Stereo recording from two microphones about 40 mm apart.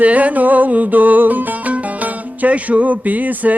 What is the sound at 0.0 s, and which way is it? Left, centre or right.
Music, right.